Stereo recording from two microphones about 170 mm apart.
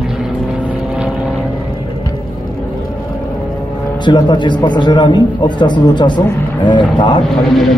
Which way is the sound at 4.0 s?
25° left (ahead or behind).